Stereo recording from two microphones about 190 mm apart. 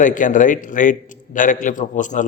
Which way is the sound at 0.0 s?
45° left (ahead or behind).